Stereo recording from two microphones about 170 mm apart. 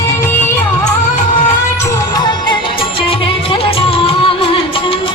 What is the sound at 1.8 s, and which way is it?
Music, 20° left (ahead or behind).